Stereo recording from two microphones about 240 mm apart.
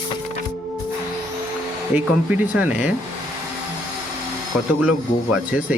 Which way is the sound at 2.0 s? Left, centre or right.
Centre.